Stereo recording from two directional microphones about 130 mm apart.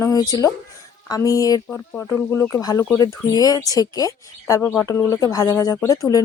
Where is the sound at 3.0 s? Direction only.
30° left (ahead or behind).